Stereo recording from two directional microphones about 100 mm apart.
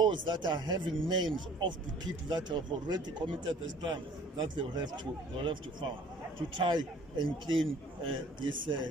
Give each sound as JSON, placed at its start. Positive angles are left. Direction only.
{"t": 0.0, "sound": "speech", "side_deg": -50}